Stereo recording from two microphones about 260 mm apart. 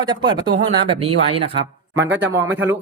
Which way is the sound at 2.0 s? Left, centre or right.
Right.